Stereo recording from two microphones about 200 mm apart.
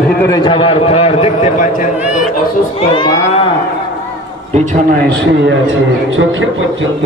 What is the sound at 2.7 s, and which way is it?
Speech, 25° left (ahead or behind).